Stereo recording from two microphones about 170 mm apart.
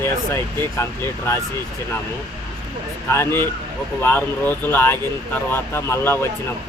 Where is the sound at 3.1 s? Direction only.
15° left (ahead or behind).